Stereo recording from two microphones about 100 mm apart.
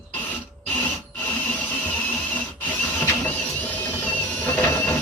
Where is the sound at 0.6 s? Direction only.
15° left (ahead or behind).